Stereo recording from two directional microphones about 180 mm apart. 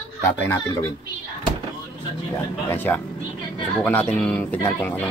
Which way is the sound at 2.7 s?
10° left (ahead or behind).